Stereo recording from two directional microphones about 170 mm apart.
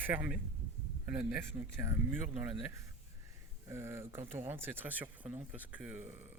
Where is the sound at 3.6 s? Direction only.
15° right (ahead or behind).